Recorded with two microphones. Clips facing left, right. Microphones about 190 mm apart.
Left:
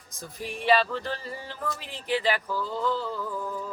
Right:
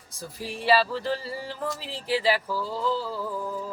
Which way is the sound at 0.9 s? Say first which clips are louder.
Right 4 dB; 35° right (ahead or behind).